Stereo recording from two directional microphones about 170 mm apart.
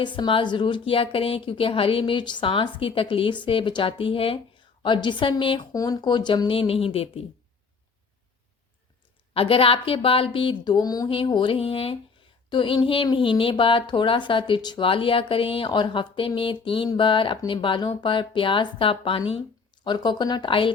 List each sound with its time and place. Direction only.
0.0 s a woman's voice: 30° left (ahead or behind)
9.3 s a woman's voice: 35° left (ahead or behind)